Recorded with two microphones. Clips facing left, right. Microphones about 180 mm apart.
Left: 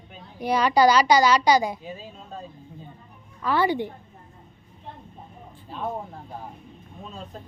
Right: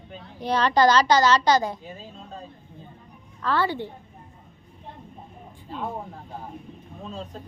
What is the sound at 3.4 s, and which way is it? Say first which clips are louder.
Speech: left 2 dB; 15° left (ahead or behind).